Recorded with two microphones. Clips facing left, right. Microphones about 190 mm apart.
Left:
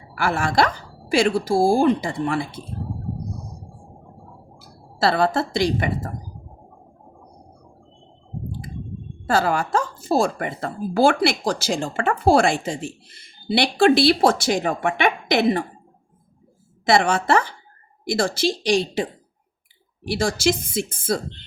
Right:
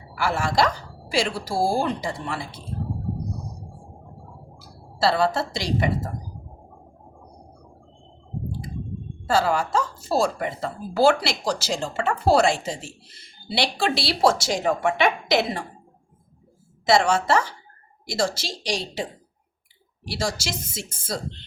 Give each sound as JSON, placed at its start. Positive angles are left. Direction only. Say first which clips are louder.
{"t": 0.2, "sound": "speech", "louder": "left 2 dB", "side_deg": 55}
{"t": 4.6, "sound": "a woman's voice", "louder": "left 1 dB", "side_deg": 55}
{"t": 9.2, "sound": "speech", "louder": "left 1 dB", "side_deg": 55}
{"t": 16.8, "sound": "speech", "louder": "left 1 dB", "side_deg": 55}
{"t": 20.1, "sound": "speech", "louder": "left 7 dB", "side_deg": 55}